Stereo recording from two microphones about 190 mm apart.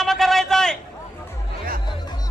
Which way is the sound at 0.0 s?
Centre (ahead or behind).